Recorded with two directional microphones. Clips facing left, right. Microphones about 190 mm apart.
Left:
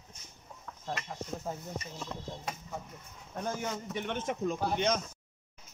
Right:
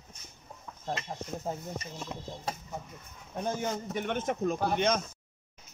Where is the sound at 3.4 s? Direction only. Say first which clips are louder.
Right 3 dB; 25° right (ahead or behind).